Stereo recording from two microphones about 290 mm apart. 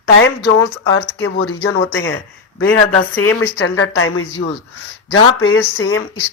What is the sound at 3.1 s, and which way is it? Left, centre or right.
Speech, centre.